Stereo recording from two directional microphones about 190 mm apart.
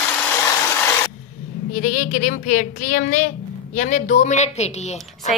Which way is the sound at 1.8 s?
40° left (ahead or behind).